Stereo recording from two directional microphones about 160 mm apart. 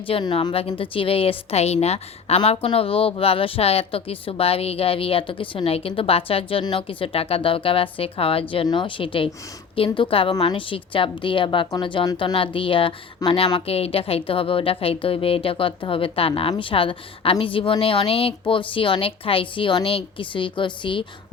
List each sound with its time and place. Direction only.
0.1 s a woman's voice: 30° left (ahead or behind)